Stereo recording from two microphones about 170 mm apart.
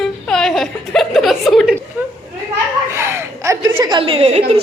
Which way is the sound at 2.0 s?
10° right (ahead or behind).